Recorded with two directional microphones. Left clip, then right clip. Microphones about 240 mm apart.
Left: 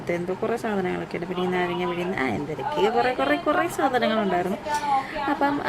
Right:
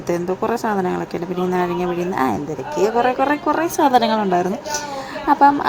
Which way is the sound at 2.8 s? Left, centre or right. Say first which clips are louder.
Right 6 dB; centre.